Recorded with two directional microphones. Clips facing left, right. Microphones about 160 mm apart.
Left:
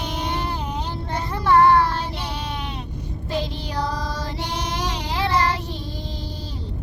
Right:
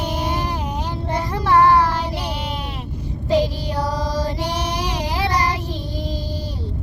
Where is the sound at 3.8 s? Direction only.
10° right (ahead or behind).